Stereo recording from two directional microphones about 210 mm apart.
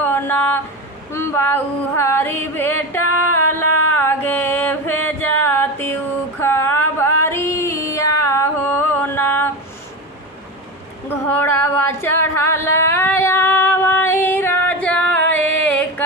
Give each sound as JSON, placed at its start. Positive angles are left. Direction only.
{"t": 0.0, "sound": "a sound", "side_deg": 10}
{"t": 1.1, "sound": "music", "side_deg": 15}
{"t": 6.4, "sound": "a sound", "side_deg": 10}
{"t": 7.2, "sound": "music", "side_deg": 10}
{"t": 11.1, "sound": "female singing", "side_deg": 10}
{"t": 15.6, "sound": "music", "side_deg": 5}